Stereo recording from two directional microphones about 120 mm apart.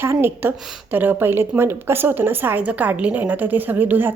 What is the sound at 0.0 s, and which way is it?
A woman's voice, 20° right (ahead or behind).